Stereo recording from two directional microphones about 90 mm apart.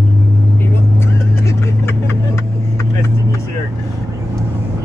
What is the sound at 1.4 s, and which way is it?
Vehicle, 30° left (ahead or behind).